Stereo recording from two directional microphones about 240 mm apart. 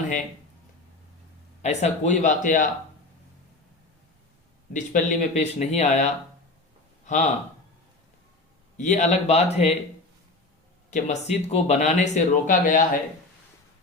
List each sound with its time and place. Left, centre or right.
1.6 s speech: left
4.7 s speech: left
8.8 s speech: left
10.9 s speech: left